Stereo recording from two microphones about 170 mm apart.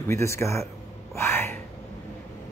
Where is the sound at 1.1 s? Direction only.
15° left (ahead or behind).